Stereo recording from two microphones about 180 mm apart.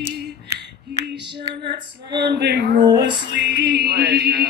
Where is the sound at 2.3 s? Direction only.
75° right (ahead or behind).